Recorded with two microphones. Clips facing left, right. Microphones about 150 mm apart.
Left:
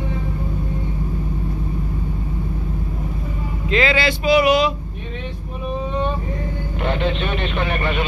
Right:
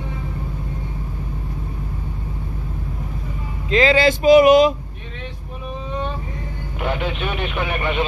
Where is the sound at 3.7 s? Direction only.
35° right (ahead or behind).